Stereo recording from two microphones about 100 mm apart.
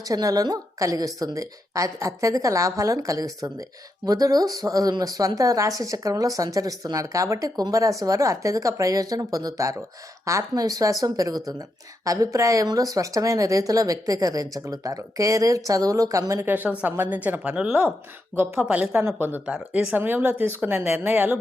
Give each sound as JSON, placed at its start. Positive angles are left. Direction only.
{"t": 0.0, "sound": "a woman's voice", "side_deg": -35}
{"t": 16.4, "sound": "speech", "side_deg": -20}